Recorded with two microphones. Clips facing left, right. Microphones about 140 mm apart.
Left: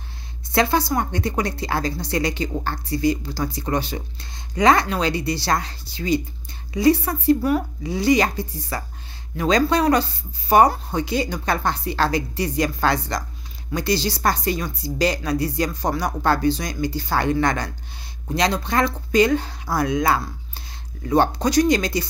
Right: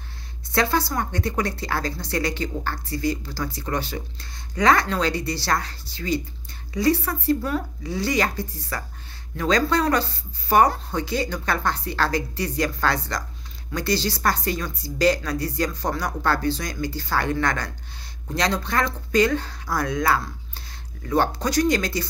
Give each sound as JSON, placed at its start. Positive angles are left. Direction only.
{"t": 0.5, "sound": "a woman's voice", "side_deg": 15}